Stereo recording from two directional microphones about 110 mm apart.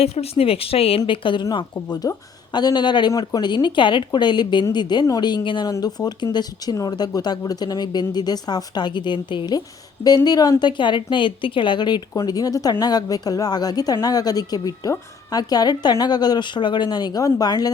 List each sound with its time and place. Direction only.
0.0 s a woman's voice: 65° left (ahead or behind); by 9.6 s 45° left (ahead or behind)
9.6 s a woman's voice: 35° left (ahead or behind)